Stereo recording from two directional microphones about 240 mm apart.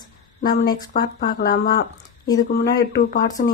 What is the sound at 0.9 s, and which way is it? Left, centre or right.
Speech, left.